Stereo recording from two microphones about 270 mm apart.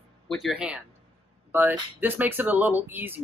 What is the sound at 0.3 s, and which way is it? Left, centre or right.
Speech, centre.